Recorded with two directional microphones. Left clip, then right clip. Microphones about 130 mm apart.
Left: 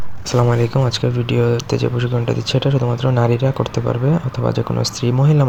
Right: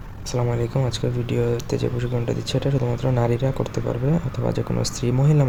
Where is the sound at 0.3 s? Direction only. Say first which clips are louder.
Left 8 dB; 30° left (ahead or behind).